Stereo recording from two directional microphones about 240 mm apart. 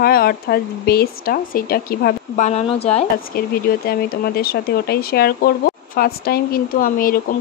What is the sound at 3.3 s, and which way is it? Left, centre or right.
Speech, left.